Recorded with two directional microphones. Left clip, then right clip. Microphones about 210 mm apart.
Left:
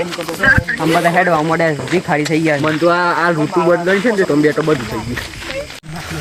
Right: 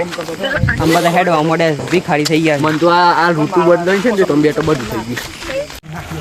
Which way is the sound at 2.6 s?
10° right (ahead or behind).